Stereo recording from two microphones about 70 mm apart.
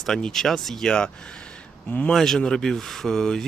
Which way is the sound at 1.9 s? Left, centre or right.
Left.